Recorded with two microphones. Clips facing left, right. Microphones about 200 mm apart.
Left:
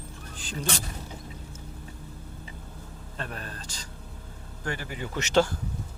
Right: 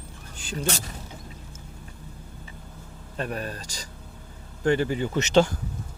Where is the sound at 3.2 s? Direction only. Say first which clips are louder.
Right 7 dB; 15° right (ahead or behind).